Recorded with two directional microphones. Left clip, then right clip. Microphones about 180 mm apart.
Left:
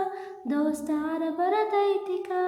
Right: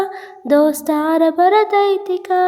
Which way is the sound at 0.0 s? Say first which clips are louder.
Right 8 dB; 50° right (ahead or behind).